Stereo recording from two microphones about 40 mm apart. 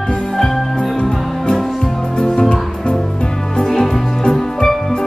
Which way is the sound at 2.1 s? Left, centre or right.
Centre.